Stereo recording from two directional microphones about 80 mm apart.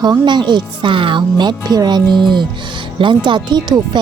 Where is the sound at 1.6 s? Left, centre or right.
Right.